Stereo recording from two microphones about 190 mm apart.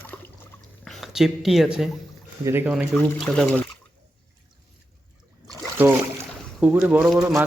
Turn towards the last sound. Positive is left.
turn(degrees=-5)  # may be behind; listen again after turning